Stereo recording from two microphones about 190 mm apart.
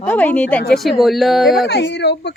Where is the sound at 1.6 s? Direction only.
65° left (ahead or behind).